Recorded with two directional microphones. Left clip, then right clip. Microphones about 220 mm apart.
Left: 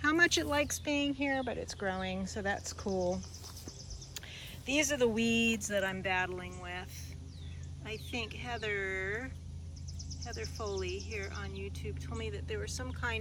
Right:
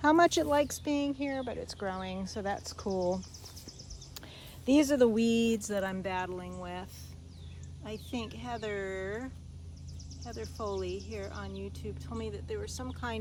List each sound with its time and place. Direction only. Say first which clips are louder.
0.0 s speech: right 4 dB; 10° right (ahead or behind)
4.6 s speech: right 5 dB; 15° right (ahead or behind)
7.9 s speech: even; 15° right (ahead or behind)